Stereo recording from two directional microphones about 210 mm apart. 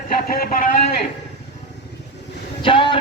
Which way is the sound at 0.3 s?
45° left (ahead or behind).